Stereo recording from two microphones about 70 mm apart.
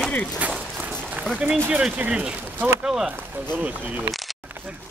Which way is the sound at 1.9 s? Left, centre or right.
Centre.